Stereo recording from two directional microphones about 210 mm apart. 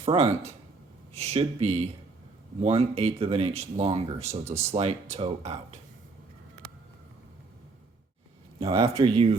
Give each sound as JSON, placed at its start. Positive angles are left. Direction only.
{"t": 0.0, "sound": "speech", "side_deg": -30}
{"t": 8.7, "sound": "speech", "side_deg": -15}